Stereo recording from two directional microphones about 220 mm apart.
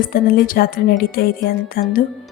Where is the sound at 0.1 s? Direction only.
40° left (ahead or behind).